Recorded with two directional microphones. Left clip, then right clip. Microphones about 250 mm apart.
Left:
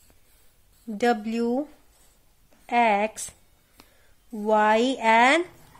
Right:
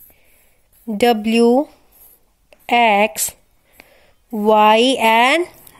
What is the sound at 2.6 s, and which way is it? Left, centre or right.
Speech, right.